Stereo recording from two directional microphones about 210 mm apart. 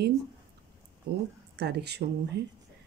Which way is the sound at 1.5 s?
50° right (ahead or behind).